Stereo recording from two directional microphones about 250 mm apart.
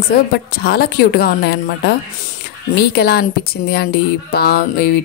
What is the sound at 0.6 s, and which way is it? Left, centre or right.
A woman's voice, left.